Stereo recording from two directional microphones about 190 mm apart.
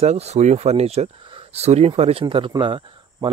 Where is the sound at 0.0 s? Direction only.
35° right (ahead or behind).